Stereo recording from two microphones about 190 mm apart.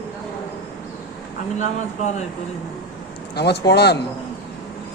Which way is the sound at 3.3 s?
60° left (ahead or behind).